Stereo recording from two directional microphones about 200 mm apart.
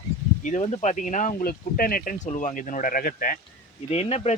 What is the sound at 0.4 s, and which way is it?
Speech, 35° left (ahead or behind).